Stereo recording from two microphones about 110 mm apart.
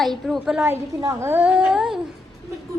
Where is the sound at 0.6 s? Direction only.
25° right (ahead or behind).